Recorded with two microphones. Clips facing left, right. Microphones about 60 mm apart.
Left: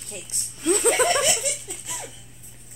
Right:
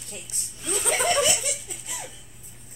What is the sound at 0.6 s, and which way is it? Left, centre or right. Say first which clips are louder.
Speech: left 9 dB; left.